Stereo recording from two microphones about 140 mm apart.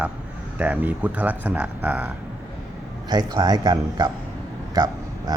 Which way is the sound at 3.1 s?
30° right (ahead or behind).